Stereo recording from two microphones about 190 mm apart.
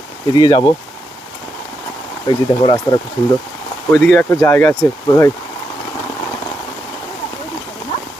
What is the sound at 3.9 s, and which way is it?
Speech, 5° left (ahead or behind).